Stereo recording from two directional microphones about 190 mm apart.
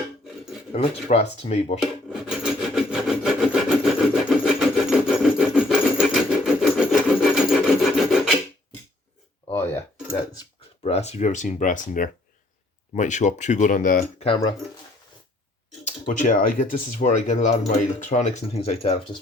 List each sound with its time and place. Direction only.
0.7 s speech: 30° left (ahead or behind)
2.4 s rub: centre (ahead or behind)
9.5 s music: 10° left (ahead or behind)
10.8 s speech: 35° left (ahead or behind)
16.0 s speech: 40° left (ahead or behind)